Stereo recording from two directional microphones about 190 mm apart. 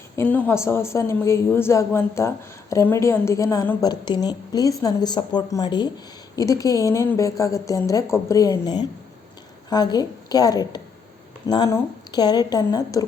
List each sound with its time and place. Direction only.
0.2 s a woman's voice: 10° left (ahead or behind)